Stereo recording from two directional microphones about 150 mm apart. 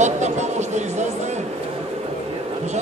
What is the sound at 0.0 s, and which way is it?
Music, 50° right (ahead or behind).